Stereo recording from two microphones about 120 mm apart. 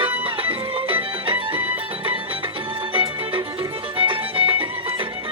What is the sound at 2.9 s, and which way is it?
Music, 45° right (ahead or behind).